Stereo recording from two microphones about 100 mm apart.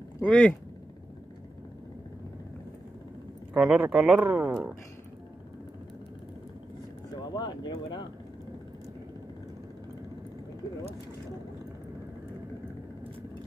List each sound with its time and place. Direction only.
0.2 s speech: 10° left (ahead or behind)
3.5 s speech: 10° right (ahead or behind)
7.2 s speech: 45° left (ahead or behind)